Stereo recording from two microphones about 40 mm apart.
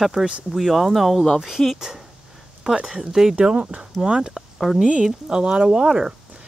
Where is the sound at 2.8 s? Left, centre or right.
Centre.